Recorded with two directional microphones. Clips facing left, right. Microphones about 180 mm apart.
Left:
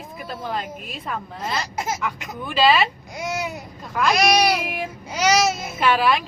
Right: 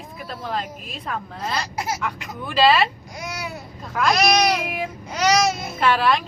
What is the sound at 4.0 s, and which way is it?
Child singing, 10° left (ahead or behind).